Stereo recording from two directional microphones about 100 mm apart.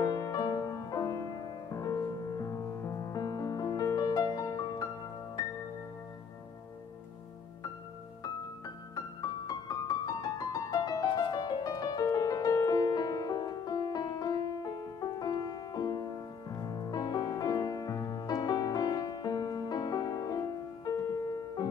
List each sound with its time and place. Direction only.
0.0 s music: 35° left (ahead or behind)
8.9 s music: 40° left (ahead or behind)